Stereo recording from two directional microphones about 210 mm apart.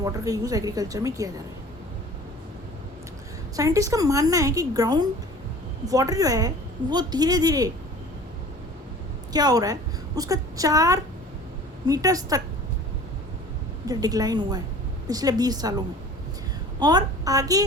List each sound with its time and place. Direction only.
0.0 s a woman's voice: 15° right (ahead or behind)
3.5 s a woman's voice: 15° right (ahead or behind)
9.3 s a woman's voice: 20° right (ahead or behind)
13.8 s a woman's voice: 20° right (ahead or behind)
16.8 s a woman's voice: 20° right (ahead or behind)